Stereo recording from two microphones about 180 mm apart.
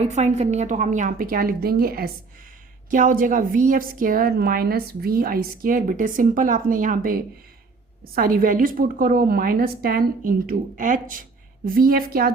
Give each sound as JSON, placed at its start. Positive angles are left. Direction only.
{"t": 0.0, "sound": "a woman's voice", "side_deg": -40}